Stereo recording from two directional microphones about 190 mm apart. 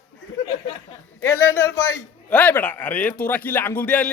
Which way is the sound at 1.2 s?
15° left (ahead or behind).